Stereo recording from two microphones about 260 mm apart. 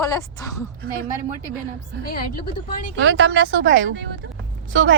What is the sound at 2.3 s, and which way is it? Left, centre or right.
Speech, left.